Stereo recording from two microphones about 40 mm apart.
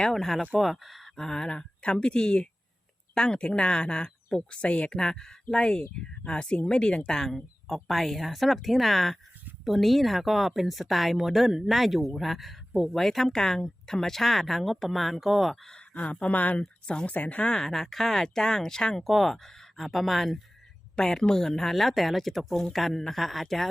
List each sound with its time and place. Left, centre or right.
0.1 s speech: centre
1.1 s speech: centre; by 4.9 s left
4.9 s speech: centre
7.1 s speech: centre
7.7 s speech: centre
12.9 s speech: centre
15.9 s speech: left
16.8 s speech: left
17.1 s speech: left
17.4 s speech: left
17.7 s speech: centre
18.9 s speech: centre
21.0 s speech: centre